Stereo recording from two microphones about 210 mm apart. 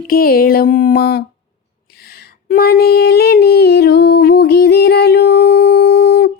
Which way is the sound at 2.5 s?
45° left (ahead or behind).